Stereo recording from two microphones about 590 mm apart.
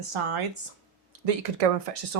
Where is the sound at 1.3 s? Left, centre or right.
Right.